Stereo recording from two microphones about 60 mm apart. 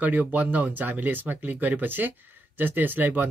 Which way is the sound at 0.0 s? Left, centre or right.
Right.